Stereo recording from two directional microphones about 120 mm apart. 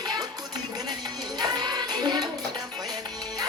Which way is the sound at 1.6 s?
35° right (ahead or behind).